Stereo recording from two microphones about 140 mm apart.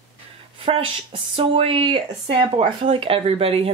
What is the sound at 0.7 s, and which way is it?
Speech, 35° right (ahead or behind).